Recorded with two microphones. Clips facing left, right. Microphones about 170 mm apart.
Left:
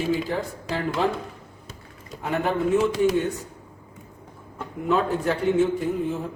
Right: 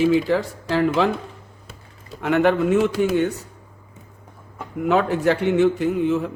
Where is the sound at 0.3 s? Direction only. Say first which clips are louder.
Right 7 dB; 90° right.